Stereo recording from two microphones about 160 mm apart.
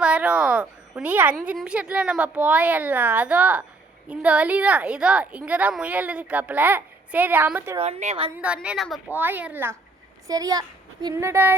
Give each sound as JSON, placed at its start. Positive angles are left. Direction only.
{"t": 0.0, "sound": "a woman's voice", "side_deg": -5}
{"t": 7.8, "sound": "a woman's voice", "side_deg": -45}
{"t": 8.4, "sound": "a woman's voice", "side_deg": -10}
{"t": 10.2, "sound": "a woman's voice", "side_deg": -20}